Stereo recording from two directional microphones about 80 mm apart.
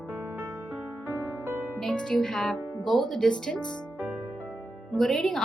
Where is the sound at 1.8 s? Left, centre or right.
Centre.